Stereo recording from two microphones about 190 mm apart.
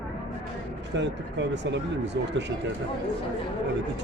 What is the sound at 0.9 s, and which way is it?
Speech, 70° right (ahead or behind).